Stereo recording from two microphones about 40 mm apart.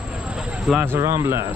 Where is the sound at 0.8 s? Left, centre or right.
Right.